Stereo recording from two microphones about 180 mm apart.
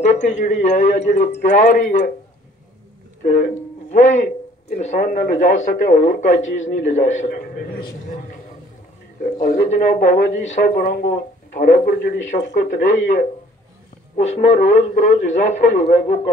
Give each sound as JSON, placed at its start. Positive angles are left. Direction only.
{"t": 0.0, "sound": "a man's voice", "side_deg": 40}
{"t": 3.9, "sound": "a man's voice", "side_deg": 40}
{"t": 7.2, "sound": "a man's voice", "side_deg": 65}
{"t": 9.2, "sound": "speech", "side_deg": 50}
{"t": 12.5, "sound": "a man's voice", "side_deg": 45}